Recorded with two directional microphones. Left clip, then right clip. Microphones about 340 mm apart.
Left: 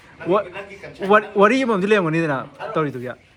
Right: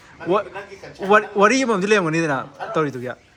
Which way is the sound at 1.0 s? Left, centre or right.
Centre.